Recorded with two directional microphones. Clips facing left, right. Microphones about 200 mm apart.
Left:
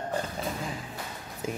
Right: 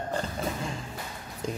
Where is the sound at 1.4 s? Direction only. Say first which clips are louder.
Even; 5° left (ahead or behind).